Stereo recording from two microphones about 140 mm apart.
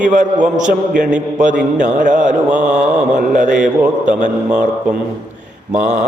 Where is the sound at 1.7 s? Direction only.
65° right (ahead or behind).